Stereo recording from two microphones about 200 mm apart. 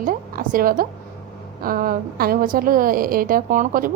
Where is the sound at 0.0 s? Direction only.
45° right (ahead or behind).